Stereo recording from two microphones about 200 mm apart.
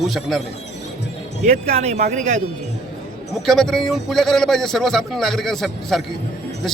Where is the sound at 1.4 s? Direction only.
35° right (ahead or behind).